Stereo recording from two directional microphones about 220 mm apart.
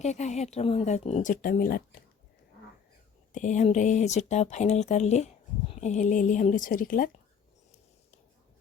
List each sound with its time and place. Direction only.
0.0 s speech: 30° left (ahead or behind)
3.3 s speech: 35° left (ahead or behind)